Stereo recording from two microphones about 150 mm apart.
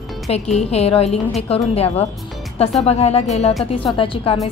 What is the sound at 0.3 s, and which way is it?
A woman's voice, 45° left (ahead or behind).